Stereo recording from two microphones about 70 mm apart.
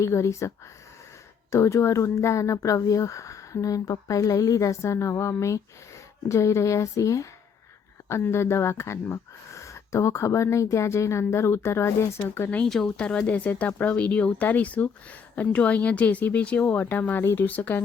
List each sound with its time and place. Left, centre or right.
0.0 s speech: left
8.0 s speech: left
12.6 s speech: centre; by 17.8 s left